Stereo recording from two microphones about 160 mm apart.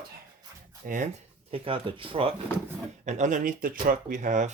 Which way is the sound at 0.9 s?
55° right (ahead or behind).